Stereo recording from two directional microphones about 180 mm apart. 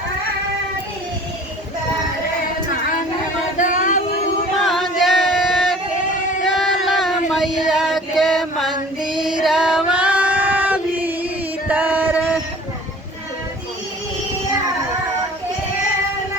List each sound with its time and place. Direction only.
3.6 s a sound: 45° left (ahead or behind)
4.5 s singing: centre (ahead or behind)
6.4 s a sound: centre (ahead or behind)
7.3 s music: 5° right (ahead or behind)
9.1 s female singing: 5° right (ahead or behind)
11.7 s music: 10° right (ahead or behind)